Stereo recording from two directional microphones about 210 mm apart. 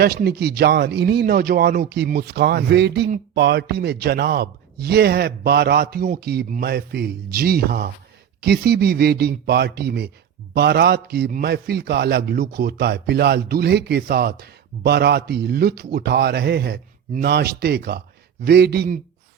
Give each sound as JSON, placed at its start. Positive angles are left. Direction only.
{"t": 0.0, "sound": "a man's voice", "side_deg": -50}